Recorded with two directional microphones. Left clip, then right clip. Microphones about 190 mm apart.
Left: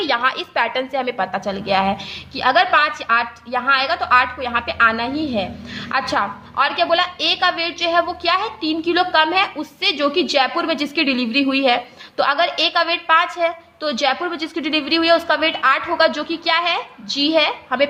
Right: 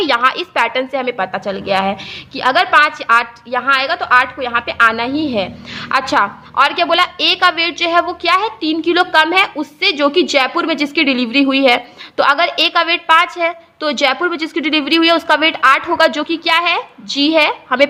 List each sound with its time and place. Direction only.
0.0 s a woman's voice: 30° right (ahead or behind)